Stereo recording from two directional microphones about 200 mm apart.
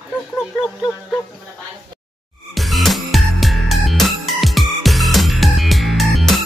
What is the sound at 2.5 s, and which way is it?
Music, centre (ahead or behind).